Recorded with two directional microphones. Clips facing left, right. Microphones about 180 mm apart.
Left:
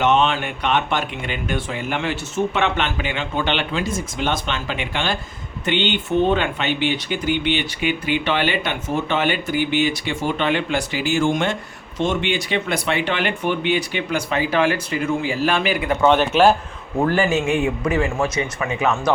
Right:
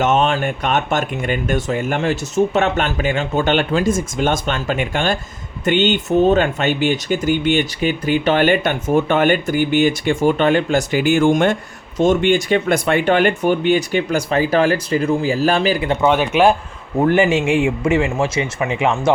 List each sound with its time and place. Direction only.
0.0 s speech: 45° right (ahead or behind); by 16.0 s 30° right (ahead or behind)
16.0 s speech: 10° right (ahead or behind)
17.0 s speech: 20° right (ahead or behind)
17.4 s a man's voice: 90° right
17.8 s speech: 25° right (ahead or behind)